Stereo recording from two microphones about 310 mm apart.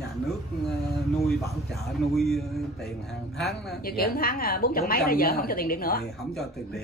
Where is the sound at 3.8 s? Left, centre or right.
Left.